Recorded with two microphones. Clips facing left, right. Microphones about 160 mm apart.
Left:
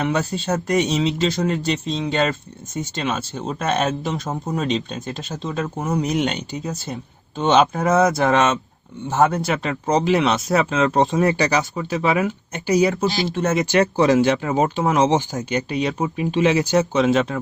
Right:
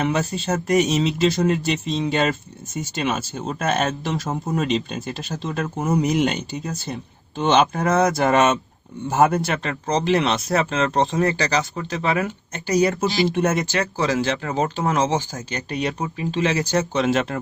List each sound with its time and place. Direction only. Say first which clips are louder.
0.0 s speech: even; centre (ahead or behind)
11.2 s speech: left 2 dB; 20° left (ahead or behind)
12.2 s speech: left 4 dB; centre (ahead or behind)
13.7 s speech: left 6 dB; 20° left (ahead or behind)
15.7 s speech: right 1 dB; centre (ahead or behind)
16.0 s speech: left 3 dB; 15° left (ahead or behind)
16.9 s speech: left 3 dB; centre (ahead or behind)